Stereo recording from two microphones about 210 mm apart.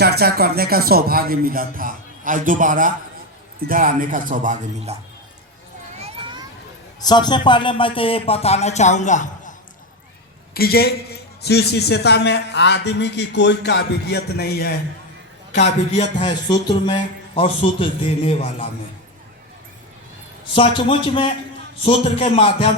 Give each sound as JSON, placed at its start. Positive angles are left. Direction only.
{"t": 0.0, "sound": "a man's voice", "side_deg": -50}
{"t": 6.0, "sound": "a sound", "side_deg": -25}
{"t": 7.0, "sound": "a man's voice", "side_deg": 20}
{"t": 15.5, "sound": "a man's voice", "side_deg": 35}
{"t": 16.5, "sound": "speech", "side_deg": 20}
{"t": 20.5, "sound": "speech", "side_deg": 25}